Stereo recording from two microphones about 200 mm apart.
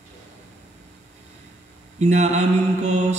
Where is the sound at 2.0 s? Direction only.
35° right (ahead or behind).